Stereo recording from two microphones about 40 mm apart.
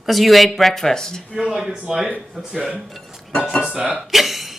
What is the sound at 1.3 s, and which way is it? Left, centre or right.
A woman's voice, centre.